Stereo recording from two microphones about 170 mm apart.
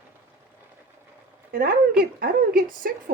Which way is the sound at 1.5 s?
60° right (ahead or behind).